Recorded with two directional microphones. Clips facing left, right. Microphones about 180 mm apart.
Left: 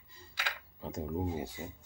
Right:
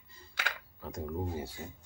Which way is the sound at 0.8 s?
20° left (ahead or behind).